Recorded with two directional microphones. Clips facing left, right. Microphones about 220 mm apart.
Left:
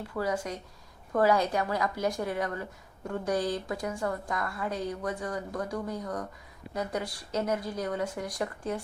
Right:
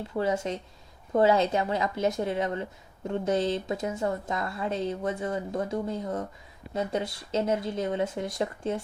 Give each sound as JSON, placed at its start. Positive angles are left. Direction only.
{"t": 0.1, "sound": "a woman's voice", "side_deg": -25}